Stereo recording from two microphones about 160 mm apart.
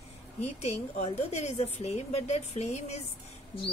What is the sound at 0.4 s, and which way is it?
Speech, 40° left (ahead or behind).